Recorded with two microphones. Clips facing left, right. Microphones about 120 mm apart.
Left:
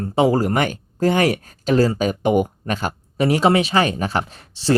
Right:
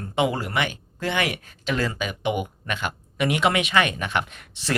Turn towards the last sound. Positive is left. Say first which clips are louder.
# left 11 dB
turn(degrees=30)  # may be behind; listen again after turning